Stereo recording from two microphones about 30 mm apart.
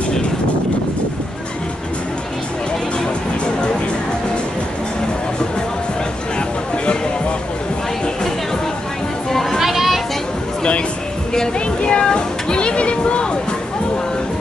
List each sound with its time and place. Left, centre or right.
9.3 s children playing: centre
9.6 s children playing: centre
11.8 s a sound: left